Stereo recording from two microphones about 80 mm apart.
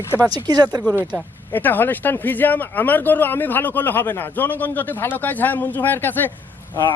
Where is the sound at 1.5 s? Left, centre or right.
Left.